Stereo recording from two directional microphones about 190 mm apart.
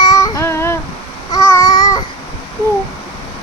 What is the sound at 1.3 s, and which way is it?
Babbling, 15° left (ahead or behind).